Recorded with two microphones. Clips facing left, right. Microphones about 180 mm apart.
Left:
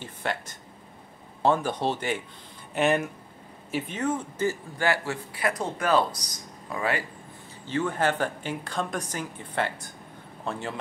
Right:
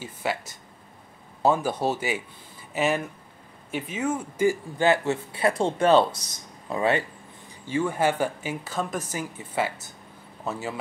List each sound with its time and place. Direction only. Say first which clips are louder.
0.0 s a man's voice: right 2 dB; 5° right (ahead or behind); by 7.1 s 25° right (ahead or behind)
7.6 s speech: right 2 dB; 10° right (ahead or behind)